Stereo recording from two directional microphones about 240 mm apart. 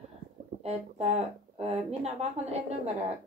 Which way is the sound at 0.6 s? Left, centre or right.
Right.